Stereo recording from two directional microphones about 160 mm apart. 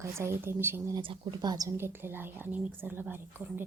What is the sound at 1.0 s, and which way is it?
A woman's voice, 30° right (ahead or behind).